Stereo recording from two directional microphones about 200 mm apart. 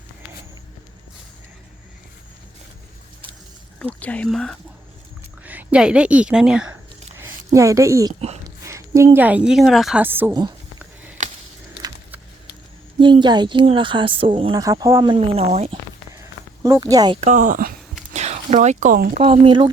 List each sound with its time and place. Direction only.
3.8 s a woman's voice: 5° left (ahead or behind)
7.2 s a sound: 15° right (ahead or behind)
8.6 s a woman's voice: 15° right (ahead or behind)
11.2 s a sound: 40° right (ahead or behind)
13.0 s speech: 25° right (ahead or behind)
16.6 s speech: 15° right (ahead or behind)
17.2 s speech: 35° right (ahead or behind)
18.1 s speech: 35° right (ahead or behind)
19.2 s speech: 25° right (ahead or behind)